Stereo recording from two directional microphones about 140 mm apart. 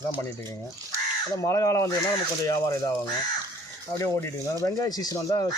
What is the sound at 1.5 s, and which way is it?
Speech, 25° left (ahead or behind).